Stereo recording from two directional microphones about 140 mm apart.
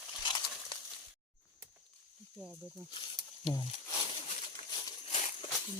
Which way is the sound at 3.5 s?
25° left (ahead or behind).